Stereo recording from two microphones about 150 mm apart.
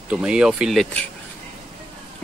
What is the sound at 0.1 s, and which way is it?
Speech, 5° right (ahead or behind).